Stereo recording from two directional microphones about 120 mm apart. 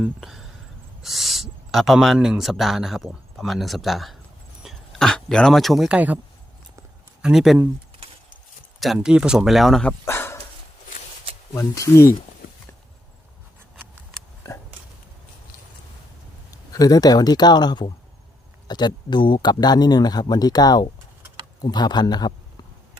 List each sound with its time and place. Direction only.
0.0 s speech: 5° right (ahead or behind)
7.2 s speech: 5° right (ahead or behind)
9.0 s speech: 5° right (ahead or behind)
10.1 s dog: 20° left (ahead or behind)
11.5 s speech: 30° left (ahead or behind)
16.5 s speech: 30° left (ahead or behind)